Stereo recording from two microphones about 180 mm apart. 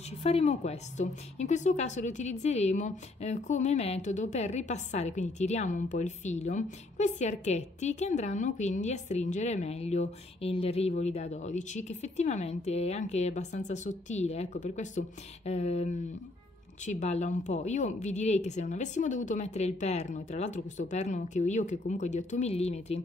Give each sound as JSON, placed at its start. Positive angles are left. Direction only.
{"t": 0.2, "sound": "speech", "side_deg": 35}